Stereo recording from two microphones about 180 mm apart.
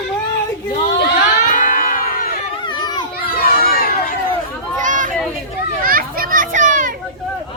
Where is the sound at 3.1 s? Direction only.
55° left (ahead or behind).